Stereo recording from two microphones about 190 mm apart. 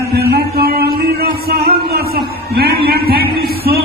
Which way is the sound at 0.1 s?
55° right (ahead or behind).